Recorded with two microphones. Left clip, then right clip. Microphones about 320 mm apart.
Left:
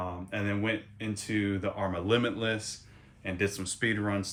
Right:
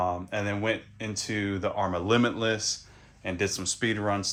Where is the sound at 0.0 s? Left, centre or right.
Centre.